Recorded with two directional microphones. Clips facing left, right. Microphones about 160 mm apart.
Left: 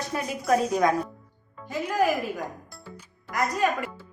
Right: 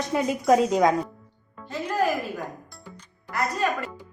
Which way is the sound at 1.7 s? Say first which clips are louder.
Left 1 dB; 10° left (ahead or behind).